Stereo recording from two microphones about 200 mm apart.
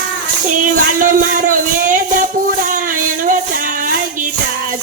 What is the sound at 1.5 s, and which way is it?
Music, 40° right (ahead or behind).